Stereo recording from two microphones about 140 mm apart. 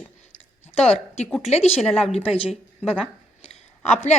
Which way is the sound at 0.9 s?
50° left (ahead or behind).